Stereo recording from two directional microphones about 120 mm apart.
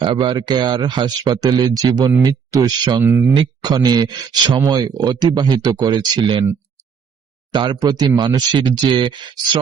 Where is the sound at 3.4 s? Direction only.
35° right (ahead or behind).